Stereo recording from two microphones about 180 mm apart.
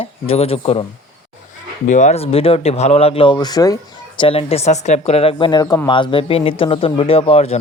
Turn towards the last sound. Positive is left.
turn(degrees=35)  # may be behind; listen again after turning